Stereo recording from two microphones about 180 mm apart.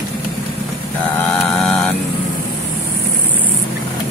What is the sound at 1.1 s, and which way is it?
Mantra, 5° left (ahead or behind).